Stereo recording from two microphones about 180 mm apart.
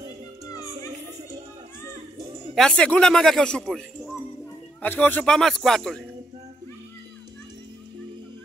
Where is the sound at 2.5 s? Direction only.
5° left (ahead or behind).